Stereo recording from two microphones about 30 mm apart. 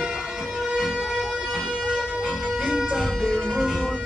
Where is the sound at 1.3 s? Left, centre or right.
Centre.